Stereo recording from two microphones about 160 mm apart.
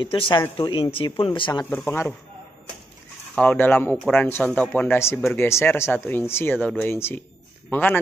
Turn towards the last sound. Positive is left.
turn(degrees=10)  # may be behind; listen again after turning